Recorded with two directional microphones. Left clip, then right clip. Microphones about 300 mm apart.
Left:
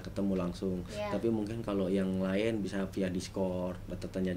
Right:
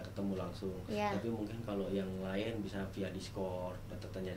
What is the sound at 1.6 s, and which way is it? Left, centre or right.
Speech, left.